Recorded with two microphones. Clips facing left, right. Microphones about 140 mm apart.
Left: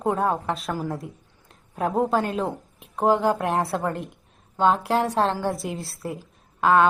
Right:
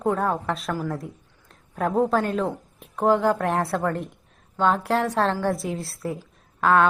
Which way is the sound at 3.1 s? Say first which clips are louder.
Right 1 dB; 30° left (ahead or behind).